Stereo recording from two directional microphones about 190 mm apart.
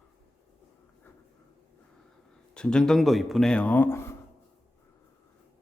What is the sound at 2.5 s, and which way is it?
A man's voice, 5° left (ahead or behind).